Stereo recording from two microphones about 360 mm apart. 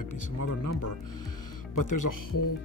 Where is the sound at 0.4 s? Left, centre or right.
Left.